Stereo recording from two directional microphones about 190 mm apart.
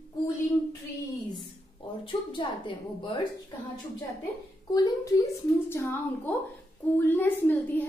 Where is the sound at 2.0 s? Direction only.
25° left (ahead or behind).